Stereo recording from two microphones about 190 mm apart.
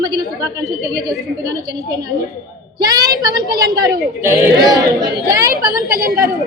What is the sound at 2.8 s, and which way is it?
A woman's voice, 20° right (ahead or behind).